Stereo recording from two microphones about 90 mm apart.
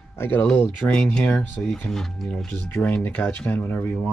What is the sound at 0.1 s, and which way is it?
Speech, 25° left (ahead or behind).